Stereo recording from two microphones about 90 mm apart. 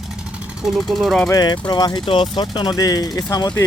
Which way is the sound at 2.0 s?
85° left.